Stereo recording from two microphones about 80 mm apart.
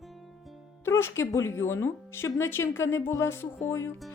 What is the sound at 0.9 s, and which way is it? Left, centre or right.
A woman's voice, left.